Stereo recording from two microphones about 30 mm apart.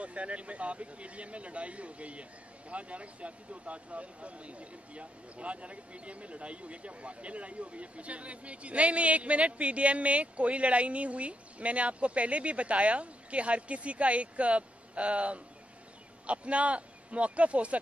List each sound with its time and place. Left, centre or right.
0.0 s speech: right